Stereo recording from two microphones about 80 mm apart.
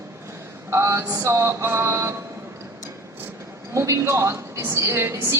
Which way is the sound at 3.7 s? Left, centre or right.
Right.